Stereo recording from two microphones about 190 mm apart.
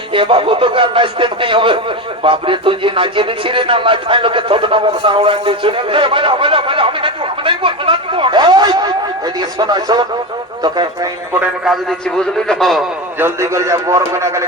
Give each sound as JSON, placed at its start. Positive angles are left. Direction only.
{"t": 0.1, "sound": "speech", "side_deg": -25}
{"t": 11.3, "sound": "a man's voice", "side_deg": -5}
{"t": 13.1, "sound": "a man's voice", "side_deg": -15}